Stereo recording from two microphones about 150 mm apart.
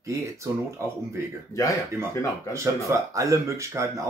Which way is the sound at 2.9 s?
20° right (ahead or behind).